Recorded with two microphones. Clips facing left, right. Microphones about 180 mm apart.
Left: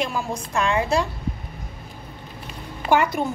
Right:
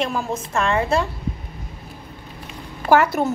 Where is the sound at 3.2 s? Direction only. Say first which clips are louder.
Right 4 dB; 45° right (ahead or behind).